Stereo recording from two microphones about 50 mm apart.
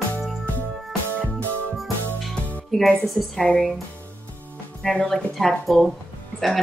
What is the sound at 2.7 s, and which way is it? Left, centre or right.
Speech, centre.